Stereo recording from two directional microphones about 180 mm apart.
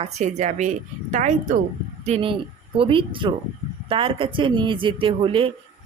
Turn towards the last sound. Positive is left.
turn(degrees=-30)  # may be behind; listen again after turning